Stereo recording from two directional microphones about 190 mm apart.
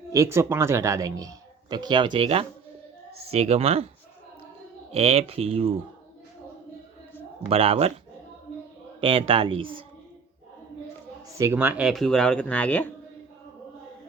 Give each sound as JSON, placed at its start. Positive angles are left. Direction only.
{"t": 0.1, "sound": "speech", "side_deg": -15}
{"t": 4.9, "sound": "speech", "side_deg": -30}
{"t": 7.4, "sound": "speech", "side_deg": -30}
{"t": 9.0, "sound": "speech", "side_deg": -30}
{"t": 11.3, "sound": "speech", "side_deg": -15}